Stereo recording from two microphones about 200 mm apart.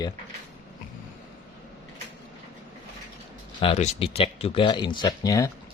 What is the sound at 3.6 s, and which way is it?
Speech, 30° left (ahead or behind).